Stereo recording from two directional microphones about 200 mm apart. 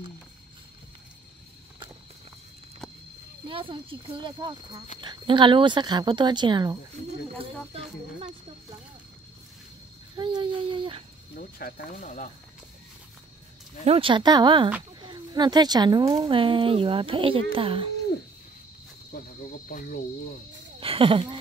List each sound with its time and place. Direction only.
3.4 s a woman's voice: 25° right (ahead or behind)
10.1 s dog: 25° right (ahead or behind)
11.3 s speech: 50° left (ahead or behind)
13.8 s a woman's voice: 25° right (ahead or behind)
19.7 s speech: 45° left (ahead or behind)
20.8 s a woman's voice: 25° right (ahead or behind)